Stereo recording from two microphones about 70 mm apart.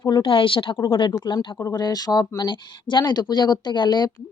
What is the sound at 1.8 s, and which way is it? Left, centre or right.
Speech, left.